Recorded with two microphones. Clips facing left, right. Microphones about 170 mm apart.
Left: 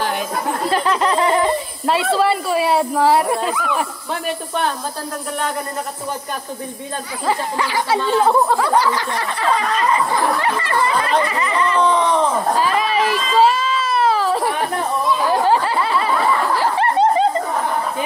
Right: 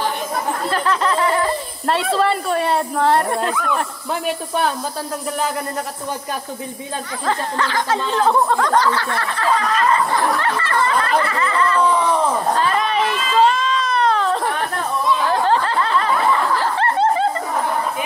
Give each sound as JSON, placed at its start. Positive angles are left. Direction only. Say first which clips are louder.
{"t": 0.7, "sound": "a sound", "louder": "left 3 dB", "side_deg": 15}
{"t": 1.9, "sound": "speech", "louder": "left 1 dB", "side_deg": 0}
{"t": 7.2, "sound": "speech", "louder": "left 1 dB", "side_deg": 10}
{"t": 11.8, "sound": "speech", "louder": "left 2 dB", "side_deg": -5}
{"t": 12.5, "sound": "a sound", "louder": "left 1 dB", "side_deg": 5}
{"t": 15.0, "sound": "chatter", "louder": "left 1 dB", "side_deg": 10}
{"t": 16.5, "sound": "snicker", "louder": "left 2 dB", "side_deg": 15}